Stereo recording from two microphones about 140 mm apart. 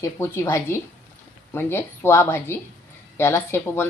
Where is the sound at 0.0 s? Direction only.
20° left (ahead or behind).